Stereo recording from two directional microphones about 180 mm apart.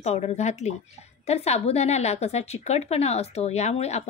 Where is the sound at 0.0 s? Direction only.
35° left (ahead or behind).